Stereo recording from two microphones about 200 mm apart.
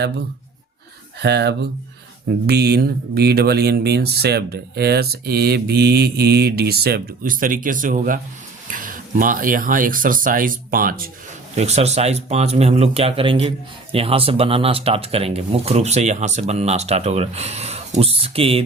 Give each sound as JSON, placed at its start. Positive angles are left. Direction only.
{"t": 1.2, "sound": "speech", "side_deg": -55}
{"t": 11.5, "sound": "speech", "side_deg": -35}